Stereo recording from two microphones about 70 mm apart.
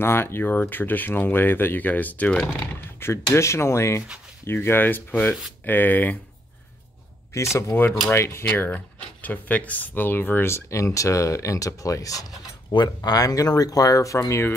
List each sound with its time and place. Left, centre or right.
0.0 s speech: left; by 2.5 s centre
3.0 s speech: left
7.3 s speech: left
10.5 s speech: left
12.7 s speech: left